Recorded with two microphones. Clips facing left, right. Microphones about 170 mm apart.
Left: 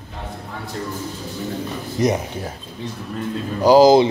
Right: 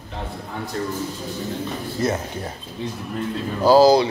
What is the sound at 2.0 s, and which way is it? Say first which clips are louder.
Speech: left 4 dB; 15° left (ahead or behind).